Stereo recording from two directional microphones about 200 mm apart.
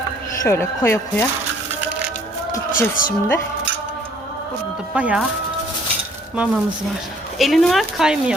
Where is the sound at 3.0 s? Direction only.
45° left (ahead or behind).